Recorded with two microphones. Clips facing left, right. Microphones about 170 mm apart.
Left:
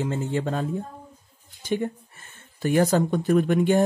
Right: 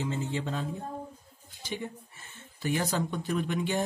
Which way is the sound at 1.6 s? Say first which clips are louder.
Left 10 dB; 55° left (ahead or behind).